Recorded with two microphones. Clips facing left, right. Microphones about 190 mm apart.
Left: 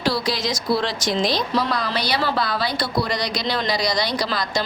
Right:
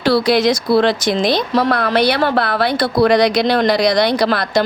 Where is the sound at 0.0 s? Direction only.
60° right (ahead or behind).